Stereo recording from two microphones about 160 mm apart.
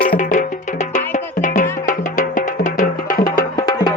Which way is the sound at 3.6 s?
25° left (ahead or behind).